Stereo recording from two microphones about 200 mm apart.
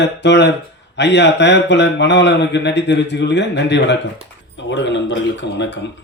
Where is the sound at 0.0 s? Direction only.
60° left (ahead or behind).